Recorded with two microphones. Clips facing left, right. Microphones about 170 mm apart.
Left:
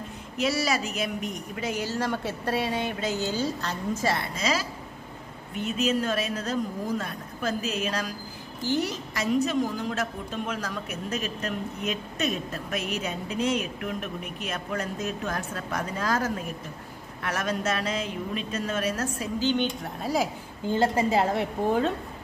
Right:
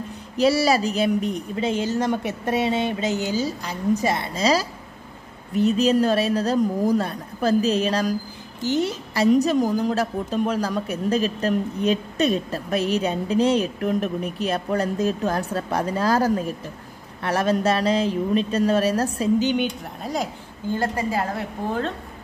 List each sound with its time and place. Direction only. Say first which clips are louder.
0.4 s a woman's voice: right 8 dB; 30° right (ahead or behind)
4.4 s a woman's voice: right 7 dB; 35° right (ahead or behind)
8.6 s a woman's voice: right 5 dB; 20° right (ahead or behind)
9.1 s a woman's voice: right 8 dB; 35° right (ahead or behind)
19.4 s a woman's voice: right 3 dB; 10° right (ahead or behind)
19.8 s speech: even; 5° left (ahead or behind)
20.6 s a woman's voice: left 1 dB; 20° left (ahead or behind)